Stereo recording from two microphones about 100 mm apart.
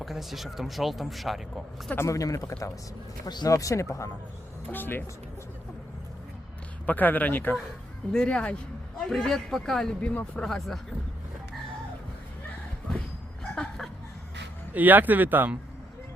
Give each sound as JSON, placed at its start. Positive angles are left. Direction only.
{"t": 0.0, "sound": "a man's voice", "side_deg": 0}
{"t": 2.0, "sound": "speech", "side_deg": 35}
{"t": 3.2, "sound": "speech", "side_deg": 40}
{"t": 6.8, "sound": "a man's voice", "side_deg": 15}
{"t": 13.6, "sound": "chuckle", "side_deg": 5}
{"t": 14.7, "sound": "speech", "side_deg": -15}